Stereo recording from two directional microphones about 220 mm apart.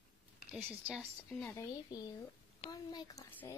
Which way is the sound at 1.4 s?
10° left (ahead or behind).